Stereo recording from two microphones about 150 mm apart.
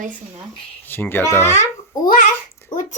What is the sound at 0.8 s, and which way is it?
Speech, 15° left (ahead or behind).